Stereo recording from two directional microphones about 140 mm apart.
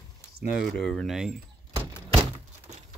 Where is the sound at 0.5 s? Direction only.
Centre (ahead or behind).